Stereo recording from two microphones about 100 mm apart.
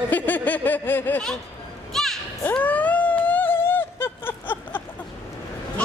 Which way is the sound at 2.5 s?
15° left (ahead or behind).